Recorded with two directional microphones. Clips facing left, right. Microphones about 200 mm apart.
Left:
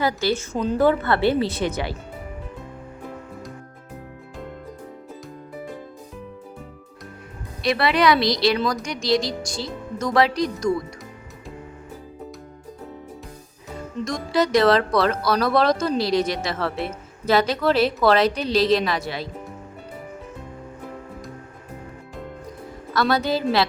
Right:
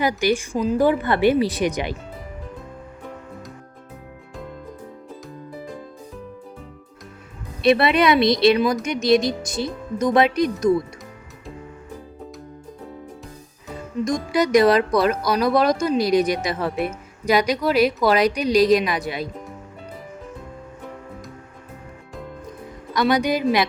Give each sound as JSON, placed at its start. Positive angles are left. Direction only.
{"t": 0.0, "sound": "speech", "side_deg": -15}
{"t": 0.5, "sound": "speech", "side_deg": -5}
{"t": 7.6, "sound": "speech", "side_deg": -25}
{"t": 14.0, "sound": "speech", "side_deg": -15}
{"t": 22.9, "sound": "speech", "side_deg": -15}